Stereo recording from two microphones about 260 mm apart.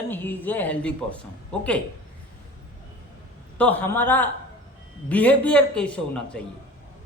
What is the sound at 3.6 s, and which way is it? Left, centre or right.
A man's voice, centre.